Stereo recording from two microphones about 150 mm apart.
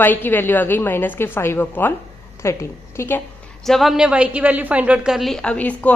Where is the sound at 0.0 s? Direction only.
15° left (ahead or behind).